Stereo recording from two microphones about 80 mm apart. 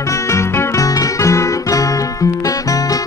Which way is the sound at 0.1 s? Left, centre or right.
Left.